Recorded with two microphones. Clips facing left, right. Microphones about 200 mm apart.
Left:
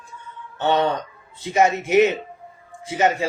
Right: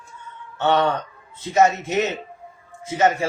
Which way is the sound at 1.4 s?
15° left (ahead or behind).